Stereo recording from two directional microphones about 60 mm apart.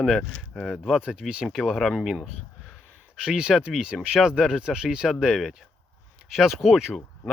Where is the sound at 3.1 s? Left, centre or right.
Centre.